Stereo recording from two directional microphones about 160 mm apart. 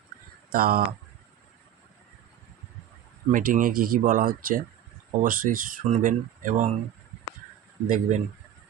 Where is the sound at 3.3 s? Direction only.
60° right (ahead or behind).